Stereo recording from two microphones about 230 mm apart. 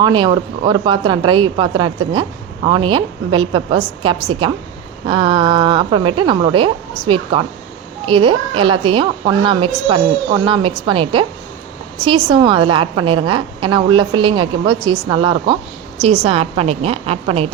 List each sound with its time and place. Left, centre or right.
0.0 s speech: centre